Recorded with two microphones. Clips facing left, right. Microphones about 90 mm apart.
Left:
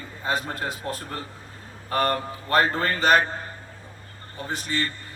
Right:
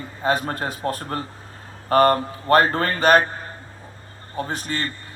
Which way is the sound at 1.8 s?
45° right (ahead or behind).